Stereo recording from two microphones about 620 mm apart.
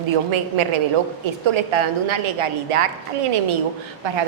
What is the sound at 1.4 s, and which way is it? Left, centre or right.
A woman's voice, right.